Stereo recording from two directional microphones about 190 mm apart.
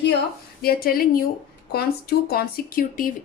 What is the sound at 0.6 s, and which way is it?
Speech, 50° left (ahead or behind).